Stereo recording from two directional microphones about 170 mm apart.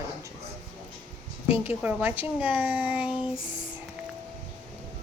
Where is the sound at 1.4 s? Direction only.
35° left (ahead or behind).